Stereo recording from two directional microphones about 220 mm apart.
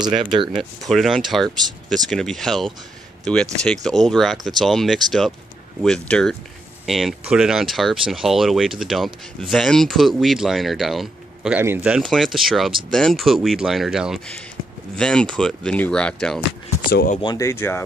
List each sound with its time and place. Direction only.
0.0 s speech: 20° right (ahead or behind)
0.6 s speech: centre (ahead or behind)
16.9 s speech: 40° left (ahead or behind)
17.2 s speech: 15° left (ahead or behind)